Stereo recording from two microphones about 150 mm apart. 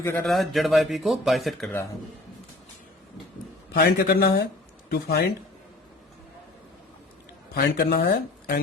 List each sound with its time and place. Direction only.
0.0 s a man's voice: 15° left (ahead or behind)
0.3 s speech: centre (ahead or behind)
3.8 s speech: 90° left
7.5 s speech: 90° left